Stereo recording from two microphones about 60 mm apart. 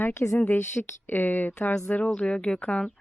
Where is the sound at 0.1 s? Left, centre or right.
Left.